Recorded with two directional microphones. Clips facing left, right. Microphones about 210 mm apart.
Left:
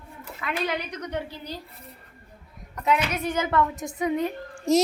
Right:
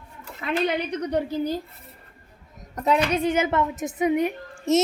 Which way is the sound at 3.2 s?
20° right (ahead or behind).